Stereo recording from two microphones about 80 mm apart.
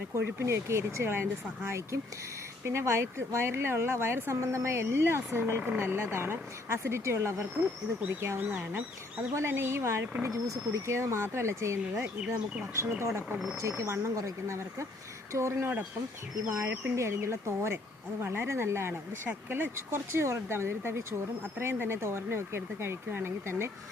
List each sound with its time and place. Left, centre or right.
0.2 s speech: right